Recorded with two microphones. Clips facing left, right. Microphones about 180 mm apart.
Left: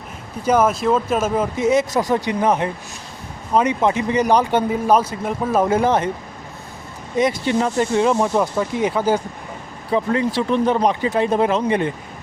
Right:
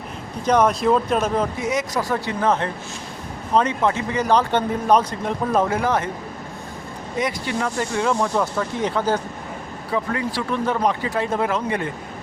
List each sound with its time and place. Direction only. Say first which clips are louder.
0.4 s speech: left 1 dB; 5° left (ahead or behind)
1.5 s speech: left 6 dB; 25° left (ahead or behind); by 5.6 s 5° left (ahead or behind)
5.6 s speech: left 4 dB; 25° left (ahead or behind)
7.2 s speech: left 6 dB; 25° left (ahead or behind)
9.9 s speech: left 5 dB; 25° left (ahead or behind)